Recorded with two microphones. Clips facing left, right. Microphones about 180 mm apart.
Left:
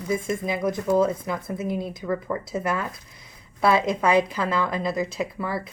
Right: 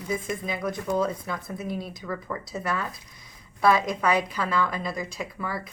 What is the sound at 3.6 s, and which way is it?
Speech, 25° left (ahead or behind).